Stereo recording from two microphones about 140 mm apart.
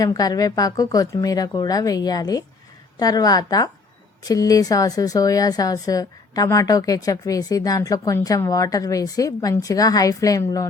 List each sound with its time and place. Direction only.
0.0 s a woman's voice: 25° left (ahead or behind)